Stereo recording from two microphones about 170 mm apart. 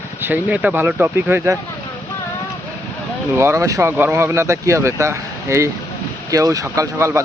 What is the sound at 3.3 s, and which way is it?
Speech, 15° right (ahead or behind).